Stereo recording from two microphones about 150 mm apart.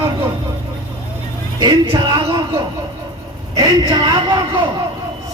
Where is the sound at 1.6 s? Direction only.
30° right (ahead or behind).